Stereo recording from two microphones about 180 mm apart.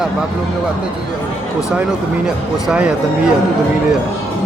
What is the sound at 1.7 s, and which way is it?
Speech, 5° right (ahead or behind).